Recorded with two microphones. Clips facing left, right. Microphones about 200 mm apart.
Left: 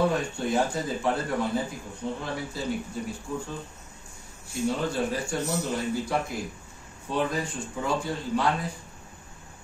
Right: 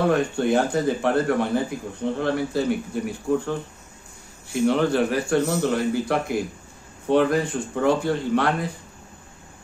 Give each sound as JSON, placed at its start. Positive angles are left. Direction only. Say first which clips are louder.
{"t": 0.0, "sound": "speech", "louder": "right 5 dB", "side_deg": -65}